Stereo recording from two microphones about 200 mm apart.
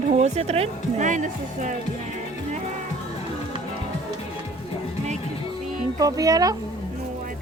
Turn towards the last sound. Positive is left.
turn(degrees=-20)  # may be behind; listen again after turning